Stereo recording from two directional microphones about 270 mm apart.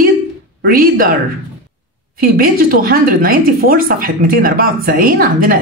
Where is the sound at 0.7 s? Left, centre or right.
Right.